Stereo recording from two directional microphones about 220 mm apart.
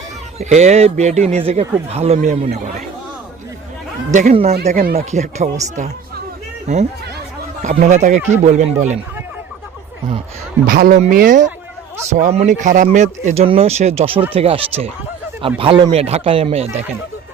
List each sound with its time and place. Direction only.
0.3 s speech: 30° right (ahead or behind)
4.1 s speech: 40° right (ahead or behind)
4.9 s speech: 30° right (ahead or behind)
6.7 s speech: 30° right (ahead or behind)
10.7 s speech: 40° right (ahead or behind)